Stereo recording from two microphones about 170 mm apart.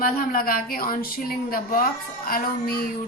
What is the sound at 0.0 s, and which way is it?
Speech, 60° left (ahead or behind).